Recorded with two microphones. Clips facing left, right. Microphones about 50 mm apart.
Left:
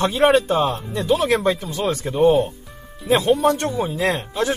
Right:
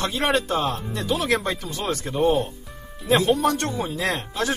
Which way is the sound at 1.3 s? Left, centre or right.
Centre.